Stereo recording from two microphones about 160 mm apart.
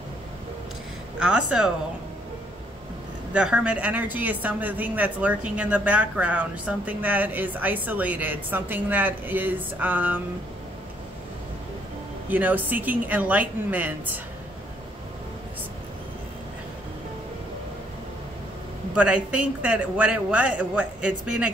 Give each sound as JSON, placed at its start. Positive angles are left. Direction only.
{"t": 1.2, "sound": "speech", "side_deg": -5}
{"t": 3.3, "sound": "a woman's voice", "side_deg": -5}
{"t": 12.3, "sound": "a woman's voice", "side_deg": -10}
{"t": 18.9, "sound": "a woman's voice", "side_deg": -10}